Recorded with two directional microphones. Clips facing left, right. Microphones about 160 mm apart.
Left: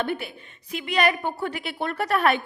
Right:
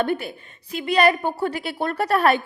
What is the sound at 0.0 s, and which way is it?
A woman's voice, 45° right (ahead or behind).